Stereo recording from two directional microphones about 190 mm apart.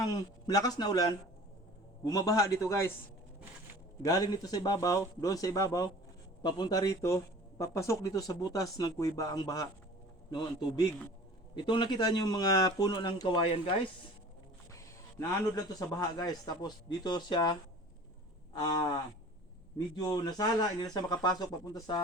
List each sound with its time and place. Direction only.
0.0 s speech: 20° left (ahead or behind)
2.0 s a man's voice: 20° left (ahead or behind)
4.0 s speech: 20° left (ahead or behind)
15.2 s a man's voice: 15° left (ahead or behind)
20.0 s speech: 20° left (ahead or behind)